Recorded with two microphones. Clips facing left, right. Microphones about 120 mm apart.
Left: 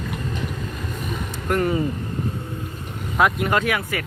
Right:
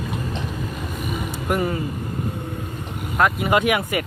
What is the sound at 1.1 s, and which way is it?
Vehicle, 10° right (ahead or behind).